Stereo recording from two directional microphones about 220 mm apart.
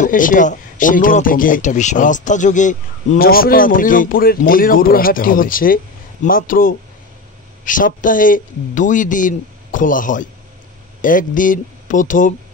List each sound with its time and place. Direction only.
0.0 s speech: 35° left (ahead or behind)